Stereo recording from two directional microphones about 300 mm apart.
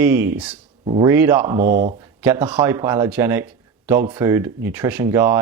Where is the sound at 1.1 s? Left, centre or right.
Centre.